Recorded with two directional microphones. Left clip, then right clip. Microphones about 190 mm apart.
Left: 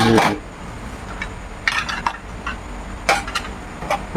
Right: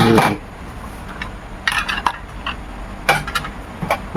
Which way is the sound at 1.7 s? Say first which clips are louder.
Right 2 dB; 30° right (ahead or behind).